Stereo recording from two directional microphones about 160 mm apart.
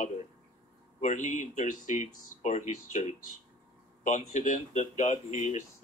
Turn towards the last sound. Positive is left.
turn(degrees=45)  # may be behind; listen again after turning